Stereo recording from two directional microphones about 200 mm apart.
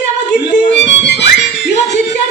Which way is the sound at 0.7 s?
60° left (ahead or behind).